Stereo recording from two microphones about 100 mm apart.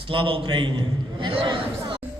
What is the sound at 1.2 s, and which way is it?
Chatter, 55° right (ahead or behind).